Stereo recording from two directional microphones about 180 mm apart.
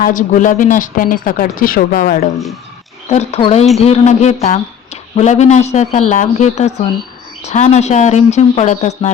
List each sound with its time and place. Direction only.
0.0 s speech: 45° left (ahead or behind)
3.1 s speech: 35° left (ahead or behind)